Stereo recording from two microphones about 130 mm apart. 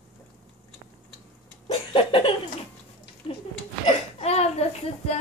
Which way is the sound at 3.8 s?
50° left (ahead or behind).